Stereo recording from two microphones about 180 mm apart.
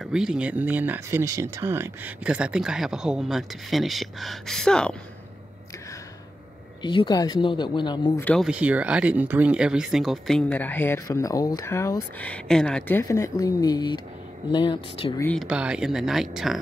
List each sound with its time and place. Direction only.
0.0 s speech: 5° right (ahead or behind)
6.8 s speech: 25° left (ahead or behind)
8.2 s speech: 10° left (ahead or behind)
8.5 s speech: 5° right (ahead or behind); by 15.1 s 30° left (ahead or behind)
15.3 s speech: 5° right (ahead or behind)